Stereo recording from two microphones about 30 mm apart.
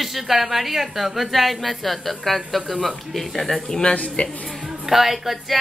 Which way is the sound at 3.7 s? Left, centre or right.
Left.